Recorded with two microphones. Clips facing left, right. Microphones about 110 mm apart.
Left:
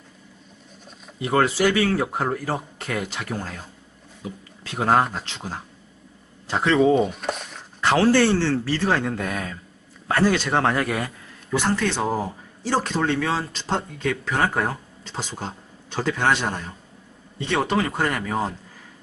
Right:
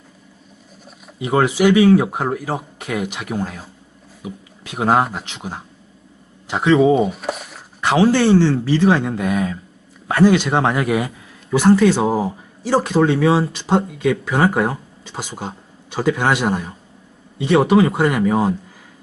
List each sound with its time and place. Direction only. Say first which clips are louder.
1.2 s speech: right 4 dB; 15° right (ahead or behind)
6.9 s a sound: right 3 dB; 5° right (ahead or behind)
7.8 s speech: right 3 dB; 15° right (ahead or behind)